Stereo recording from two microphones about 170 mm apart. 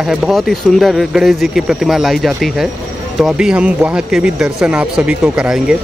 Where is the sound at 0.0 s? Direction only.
Centre (ahead or behind).